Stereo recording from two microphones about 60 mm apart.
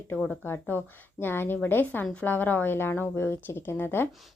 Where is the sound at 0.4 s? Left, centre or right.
Left.